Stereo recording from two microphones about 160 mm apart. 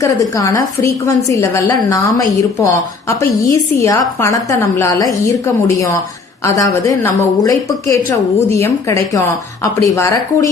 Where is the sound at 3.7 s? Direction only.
20° left (ahead or behind).